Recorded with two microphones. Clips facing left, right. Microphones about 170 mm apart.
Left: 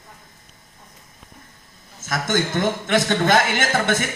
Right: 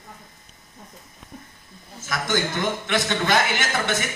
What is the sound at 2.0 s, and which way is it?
A man's voice, 50° left (ahead or behind).